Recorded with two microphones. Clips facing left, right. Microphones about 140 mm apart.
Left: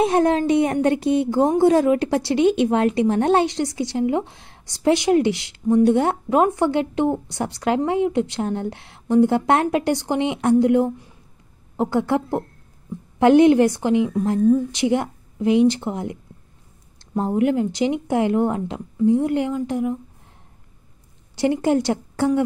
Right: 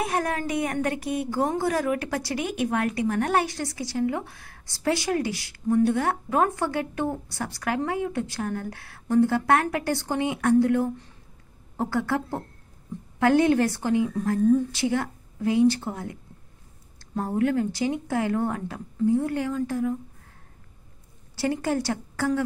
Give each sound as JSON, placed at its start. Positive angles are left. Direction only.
{"t": 0.0, "sound": "speech", "side_deg": 25}
{"t": 21.4, "sound": "speech", "side_deg": 20}